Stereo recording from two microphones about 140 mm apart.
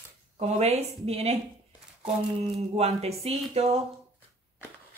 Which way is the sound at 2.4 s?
45° right (ahead or behind).